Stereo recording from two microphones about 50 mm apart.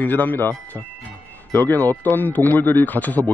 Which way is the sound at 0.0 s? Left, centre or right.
Left.